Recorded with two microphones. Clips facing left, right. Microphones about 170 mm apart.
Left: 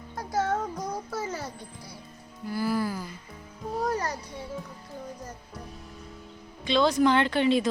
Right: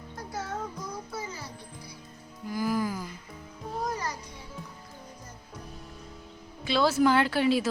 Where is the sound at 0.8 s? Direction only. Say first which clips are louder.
Left 5 dB; 85° left.